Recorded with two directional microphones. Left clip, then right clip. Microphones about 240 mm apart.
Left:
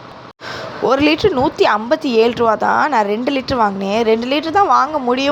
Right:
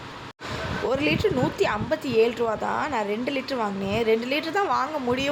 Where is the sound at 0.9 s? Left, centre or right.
Left.